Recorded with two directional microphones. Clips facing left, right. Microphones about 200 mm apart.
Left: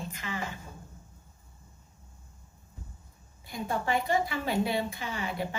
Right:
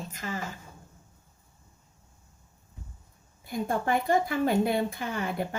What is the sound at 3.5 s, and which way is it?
A woman's voice, 50° right (ahead or behind).